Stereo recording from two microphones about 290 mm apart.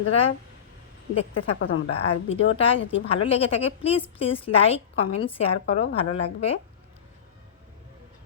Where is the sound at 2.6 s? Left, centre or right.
Centre.